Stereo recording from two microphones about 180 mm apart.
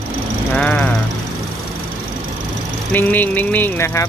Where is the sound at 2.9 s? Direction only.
10° left (ahead or behind).